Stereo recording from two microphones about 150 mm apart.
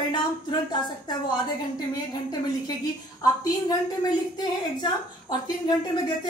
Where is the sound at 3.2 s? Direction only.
25° left (ahead or behind).